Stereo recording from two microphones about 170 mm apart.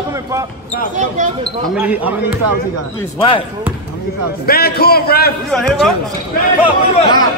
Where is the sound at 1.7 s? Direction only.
10° right (ahead or behind).